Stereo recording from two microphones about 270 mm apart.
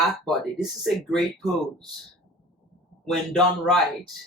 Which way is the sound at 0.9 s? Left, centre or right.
Centre.